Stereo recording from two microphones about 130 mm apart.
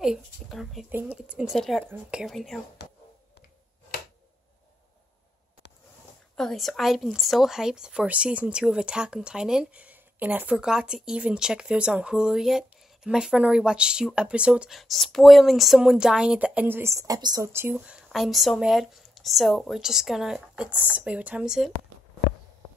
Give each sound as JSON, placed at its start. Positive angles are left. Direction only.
{"t": 0.0, "sound": "speech", "side_deg": 0}
{"t": 0.8, "sound": "speech", "side_deg": -15}
{"t": 6.3, "sound": "speech", "side_deg": 5}
{"t": 17.5, "sound": "speech", "side_deg": -20}
{"t": 17.7, "sound": "speech", "side_deg": -5}